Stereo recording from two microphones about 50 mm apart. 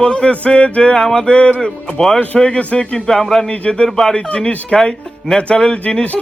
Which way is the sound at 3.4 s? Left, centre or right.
Left.